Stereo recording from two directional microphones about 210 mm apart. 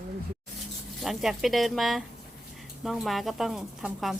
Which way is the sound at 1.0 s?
Centre (ahead or behind).